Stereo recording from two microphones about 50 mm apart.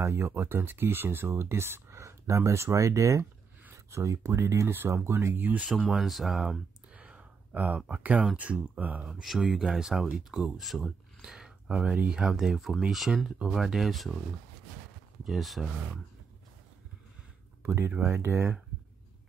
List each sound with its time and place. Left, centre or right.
0.0 s speech: right
1.3 s speech: right
1.9 s speech: right
4.6 s speech: right
5.3 s speech: right
5.7 s speech: centre
7.0 s a sound: right
7.9 s speech: right
9.1 s speech: centre
12.3 s speech: centre
15.2 s speech: centre
17.6 s speech: right